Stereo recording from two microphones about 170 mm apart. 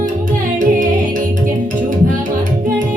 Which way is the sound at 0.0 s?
50° right (ahead or behind).